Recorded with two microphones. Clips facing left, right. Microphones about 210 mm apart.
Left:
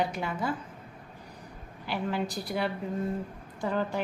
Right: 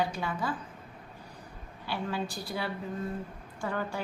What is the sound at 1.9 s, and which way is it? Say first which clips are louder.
A woman's voice: left 3 dB; 20° left (ahead or behind).